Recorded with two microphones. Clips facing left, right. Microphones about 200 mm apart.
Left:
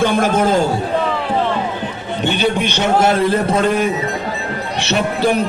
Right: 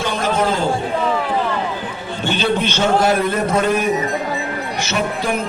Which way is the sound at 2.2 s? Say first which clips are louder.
Left 1 dB; 15° left (ahead or behind).